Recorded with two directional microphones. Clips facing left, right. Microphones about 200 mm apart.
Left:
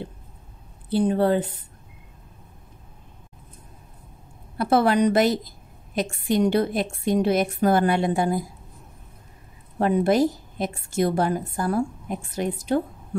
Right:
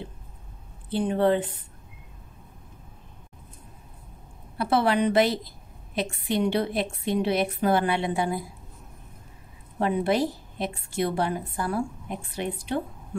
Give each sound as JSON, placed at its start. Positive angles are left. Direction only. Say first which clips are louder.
{"t": 0.8, "sound": "speech", "louder": "left 2 dB", "side_deg": 40}
{"t": 4.6, "sound": "a woman's voice", "louder": "left 4 dB", "side_deg": 45}
{"t": 9.8, "sound": "a woman's voice", "louder": "left 4 dB", "side_deg": 45}